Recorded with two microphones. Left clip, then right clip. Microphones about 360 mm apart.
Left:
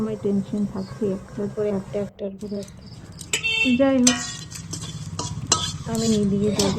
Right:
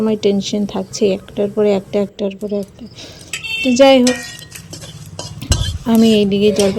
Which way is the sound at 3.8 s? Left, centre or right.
Centre.